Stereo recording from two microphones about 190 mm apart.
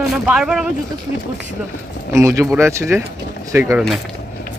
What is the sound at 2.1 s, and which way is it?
Speech, 15° right (ahead or behind).